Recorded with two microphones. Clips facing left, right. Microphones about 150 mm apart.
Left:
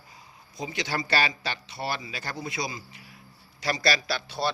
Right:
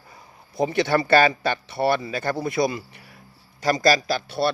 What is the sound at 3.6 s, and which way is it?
Speech, 45° right (ahead or behind).